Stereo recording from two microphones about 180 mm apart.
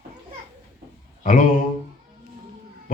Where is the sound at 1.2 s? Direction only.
45° left (ahead or behind).